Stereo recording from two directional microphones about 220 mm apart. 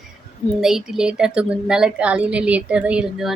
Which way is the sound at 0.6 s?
Centre (ahead or behind).